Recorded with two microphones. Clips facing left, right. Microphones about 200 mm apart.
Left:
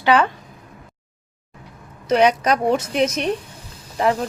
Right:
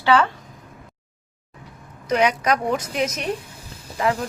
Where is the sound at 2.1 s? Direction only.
30° left (ahead or behind).